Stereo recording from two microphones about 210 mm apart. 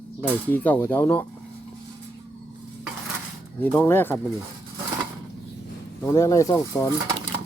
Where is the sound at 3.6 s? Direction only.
10° left (ahead or behind).